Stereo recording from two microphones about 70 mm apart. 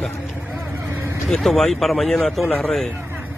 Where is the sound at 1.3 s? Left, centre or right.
Centre.